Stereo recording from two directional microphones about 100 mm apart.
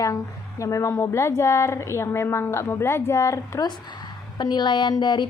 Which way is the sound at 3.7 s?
45° left (ahead or behind).